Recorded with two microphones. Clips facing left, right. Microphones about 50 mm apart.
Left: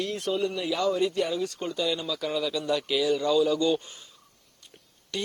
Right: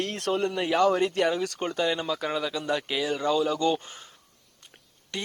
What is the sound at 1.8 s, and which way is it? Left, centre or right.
Speech, right.